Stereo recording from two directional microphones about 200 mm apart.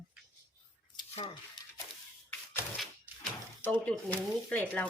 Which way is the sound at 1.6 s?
20° left (ahead or behind).